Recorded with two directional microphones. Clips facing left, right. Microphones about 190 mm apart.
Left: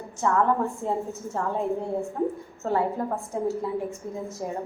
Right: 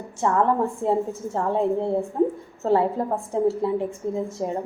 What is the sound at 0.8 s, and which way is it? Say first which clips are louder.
A woman's voice: right 6 dB; 30° right (ahead or behind).